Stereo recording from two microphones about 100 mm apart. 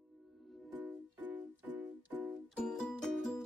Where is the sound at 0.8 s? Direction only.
15° right (ahead or behind).